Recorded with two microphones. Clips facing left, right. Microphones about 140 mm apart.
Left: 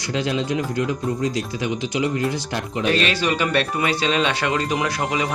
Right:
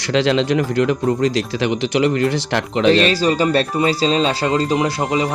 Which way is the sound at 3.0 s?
35° right (ahead or behind).